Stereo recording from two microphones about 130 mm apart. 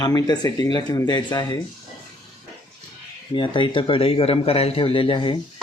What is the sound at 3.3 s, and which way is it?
A man's voice, 40° left (ahead or behind).